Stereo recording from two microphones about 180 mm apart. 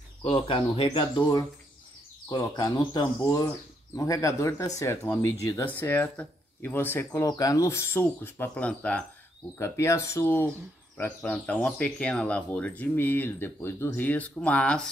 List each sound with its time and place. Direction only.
0.2 s speech: 30° left (ahead or behind); by 14.9 s 5° left (ahead or behind)